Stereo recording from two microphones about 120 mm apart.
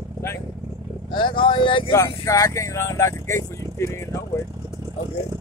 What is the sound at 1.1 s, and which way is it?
Speech, 40° left (ahead or behind).